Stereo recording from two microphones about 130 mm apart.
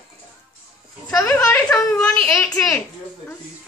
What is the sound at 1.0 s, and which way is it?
A child's voice, 20° left (ahead or behind).